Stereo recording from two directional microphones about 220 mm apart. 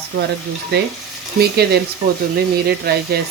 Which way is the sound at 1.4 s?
45° right (ahead or behind).